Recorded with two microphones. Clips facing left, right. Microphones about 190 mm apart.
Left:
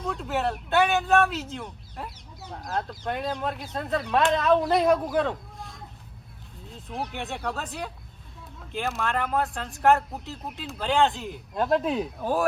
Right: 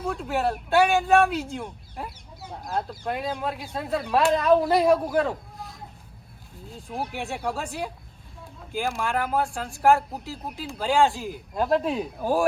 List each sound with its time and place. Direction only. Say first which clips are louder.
0.0 s speech: right 2 dB; 5° right (ahead or behind)
0.9 s speech: right 2 dB; 10° right (ahead or behind)
6.8 s speech: right 2 dB; 5° right (ahead or behind)